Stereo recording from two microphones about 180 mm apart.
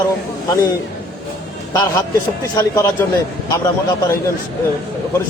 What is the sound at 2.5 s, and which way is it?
Speech, 15° left (ahead or behind).